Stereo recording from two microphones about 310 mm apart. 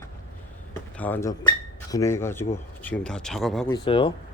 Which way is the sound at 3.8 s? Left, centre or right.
Centre.